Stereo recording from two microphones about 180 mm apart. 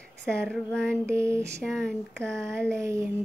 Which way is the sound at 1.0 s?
15° right (ahead or behind).